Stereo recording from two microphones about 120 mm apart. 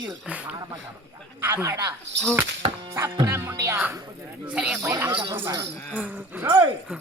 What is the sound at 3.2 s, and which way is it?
Speech, 20° right (ahead or behind).